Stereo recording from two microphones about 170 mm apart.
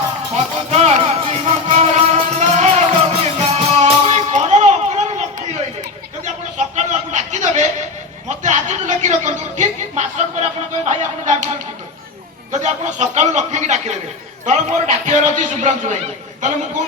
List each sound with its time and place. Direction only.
0.3 s music: 40° right (ahead or behind)
6.2 s a sound: 45° right (ahead or behind)
10.8 s a man's voice: 45° right (ahead or behind)
12.5 s a man's voice: 45° right (ahead or behind)